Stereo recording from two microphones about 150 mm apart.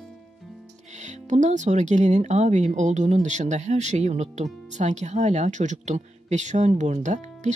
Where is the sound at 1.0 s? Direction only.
55° right (ahead or behind).